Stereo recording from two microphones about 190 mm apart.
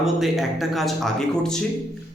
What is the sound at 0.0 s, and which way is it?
A man's voice, centre (ahead or behind).